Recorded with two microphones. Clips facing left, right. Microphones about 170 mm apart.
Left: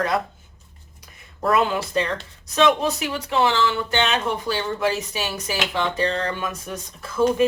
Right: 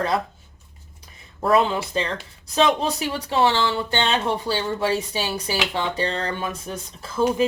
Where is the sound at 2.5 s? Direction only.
35° right (ahead or behind).